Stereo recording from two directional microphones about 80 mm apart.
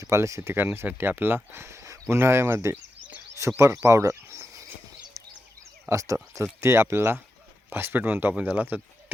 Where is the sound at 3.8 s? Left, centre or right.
Right.